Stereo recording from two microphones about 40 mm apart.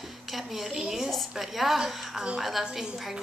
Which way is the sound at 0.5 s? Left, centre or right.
Centre.